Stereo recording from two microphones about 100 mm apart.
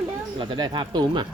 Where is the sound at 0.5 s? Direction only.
40° right (ahead or behind).